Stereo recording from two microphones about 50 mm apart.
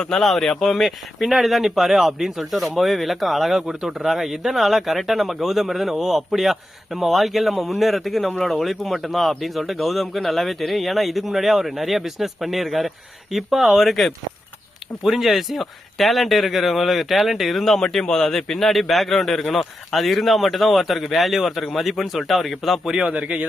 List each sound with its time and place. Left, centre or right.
0.0 s speech: centre
23.0 s speech: right